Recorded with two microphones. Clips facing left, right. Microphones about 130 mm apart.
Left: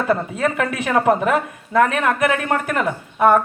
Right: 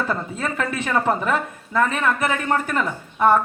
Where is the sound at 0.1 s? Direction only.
75° left (ahead or behind).